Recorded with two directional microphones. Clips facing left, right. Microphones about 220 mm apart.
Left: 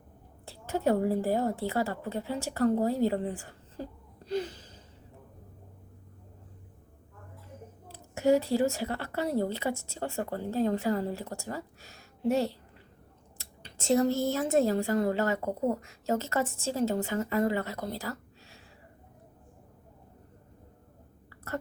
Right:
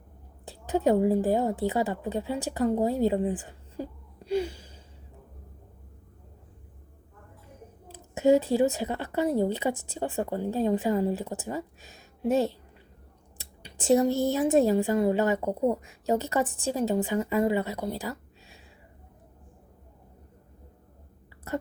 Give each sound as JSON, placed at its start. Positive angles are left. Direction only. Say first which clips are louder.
{"t": 0.4, "sound": "a woman's voice", "louder": "right 4 dB", "side_deg": -15}
{"t": 4.3, "sound": "gasp", "louder": "right 4 dB", "side_deg": -10}
{"t": 7.9, "sound": "a woman's voice", "louder": "right 3 dB", "side_deg": -20}